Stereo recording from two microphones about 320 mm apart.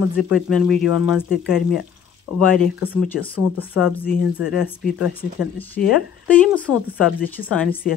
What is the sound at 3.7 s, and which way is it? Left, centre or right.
Speech, centre.